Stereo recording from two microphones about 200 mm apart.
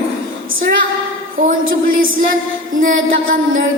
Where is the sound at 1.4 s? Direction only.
45° right (ahead or behind).